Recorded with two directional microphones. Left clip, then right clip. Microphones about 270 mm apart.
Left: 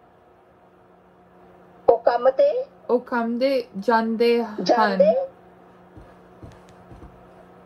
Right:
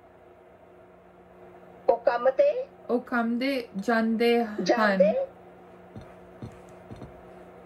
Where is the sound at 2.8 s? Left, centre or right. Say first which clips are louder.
Left 5 dB; centre.